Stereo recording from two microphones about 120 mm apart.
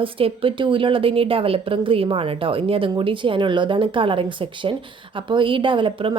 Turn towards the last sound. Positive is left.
turn(degrees=-45)  # may be behind; listen again after turning